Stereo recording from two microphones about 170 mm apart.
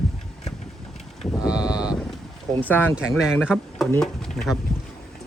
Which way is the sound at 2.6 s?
10° left (ahead or behind).